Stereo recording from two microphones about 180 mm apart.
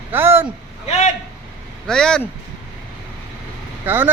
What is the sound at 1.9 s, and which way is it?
Speech, 5° left (ahead or behind).